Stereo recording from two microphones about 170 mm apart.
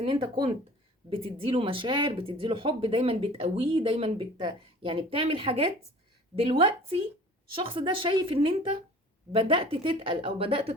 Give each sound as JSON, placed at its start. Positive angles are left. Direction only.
{"t": 0.0, "sound": "speech", "side_deg": -30}